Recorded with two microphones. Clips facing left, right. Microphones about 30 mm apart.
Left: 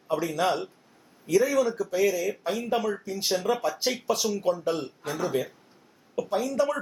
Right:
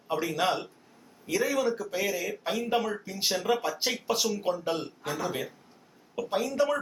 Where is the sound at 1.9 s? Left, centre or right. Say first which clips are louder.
Left 6 dB; centre.